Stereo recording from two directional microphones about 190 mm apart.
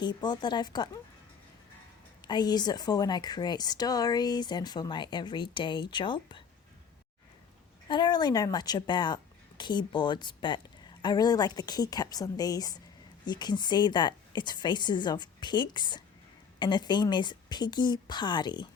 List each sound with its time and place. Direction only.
0.0 s speech: 20° left (ahead or behind)
2.2 s speech: 20° left (ahead or behind)
7.9 s speech: 25° left (ahead or behind)